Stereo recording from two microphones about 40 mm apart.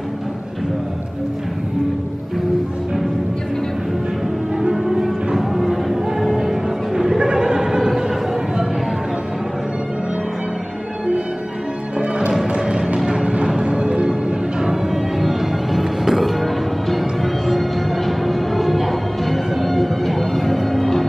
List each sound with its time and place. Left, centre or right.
4.7 s music: centre
7.2 s a sound: centre
12.3 s music: centre
14.6 s music: centre
16.3 s change ringing: centre
17.5 s music: centre